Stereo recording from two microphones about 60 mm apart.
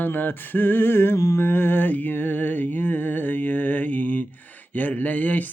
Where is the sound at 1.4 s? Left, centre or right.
Left.